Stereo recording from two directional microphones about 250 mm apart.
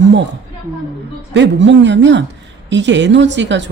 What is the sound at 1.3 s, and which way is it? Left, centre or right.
A woman's voice, right.